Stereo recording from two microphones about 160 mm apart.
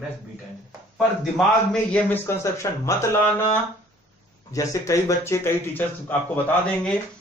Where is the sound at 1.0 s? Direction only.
Centre (ahead or behind); by 3.1 s 15° left (ahead or behind).